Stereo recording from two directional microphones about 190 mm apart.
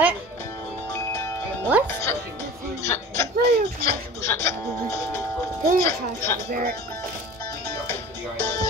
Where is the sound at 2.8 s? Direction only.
15° left (ahead or behind).